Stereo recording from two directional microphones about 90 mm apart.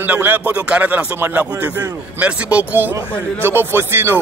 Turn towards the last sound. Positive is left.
turn(degrees=-25)  # may be behind; listen again after turning